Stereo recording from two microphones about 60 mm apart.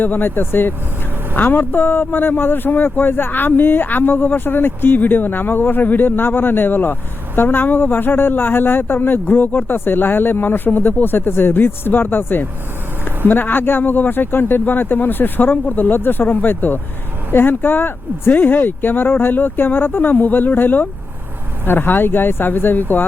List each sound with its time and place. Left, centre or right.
0.0 s speech: left